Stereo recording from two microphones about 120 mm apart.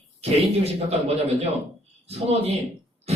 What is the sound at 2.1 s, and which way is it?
Speech, 60° right (ahead or behind).